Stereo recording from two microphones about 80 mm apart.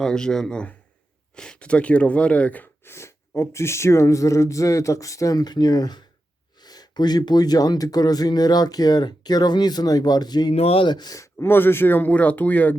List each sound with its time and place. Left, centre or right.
0.0 s speech: centre
2.9 s speech: left
11.2 s speech: left
11.5 s speech: left